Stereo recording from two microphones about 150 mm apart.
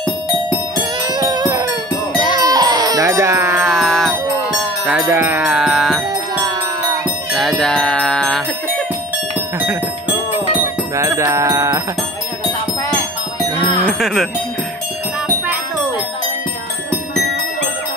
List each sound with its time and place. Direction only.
0.7 s music: 25° right (ahead or behind)
2.3 s baby cry: 25° right (ahead or behind)
3.6 s music: centre (ahead or behind)
4.8 s music: 10° right (ahead or behind)
7.3 s music: centre (ahead or behind)
9.6 s music: 10° right (ahead or behind)
11.0 s a sound: 20° right (ahead or behind)
13.7 s music: centre (ahead or behind)